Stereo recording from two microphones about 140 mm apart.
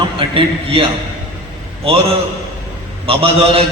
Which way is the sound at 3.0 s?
40° right (ahead or behind).